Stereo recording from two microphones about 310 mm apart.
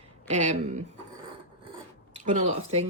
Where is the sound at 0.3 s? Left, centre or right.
Right.